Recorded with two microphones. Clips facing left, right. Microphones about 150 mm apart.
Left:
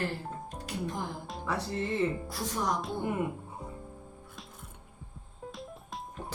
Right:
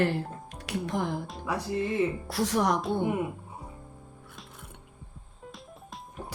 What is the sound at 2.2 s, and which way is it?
Speech, 75° right (ahead or behind).